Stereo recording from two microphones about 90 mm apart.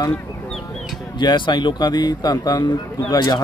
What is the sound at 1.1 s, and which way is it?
Speech, 60° left (ahead or behind).